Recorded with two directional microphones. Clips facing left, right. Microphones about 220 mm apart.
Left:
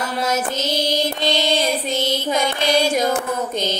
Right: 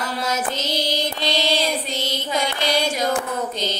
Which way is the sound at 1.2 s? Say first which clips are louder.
Even; 50° left (ahead or behind).